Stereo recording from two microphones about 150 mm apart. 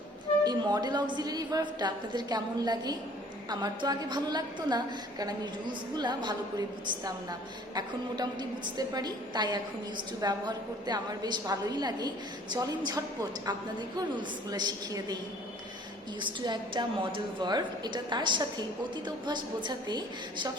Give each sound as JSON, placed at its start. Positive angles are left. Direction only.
{"t": 0.4, "sound": "a woman's voice", "side_deg": -30}
{"t": 7.8, "sound": "a woman's voice", "side_deg": -30}
{"t": 16.2, "sound": "a woman's voice", "side_deg": -30}